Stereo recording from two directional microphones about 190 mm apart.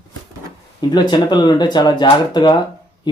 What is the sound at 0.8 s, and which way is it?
Speech, 25° left (ahead or behind).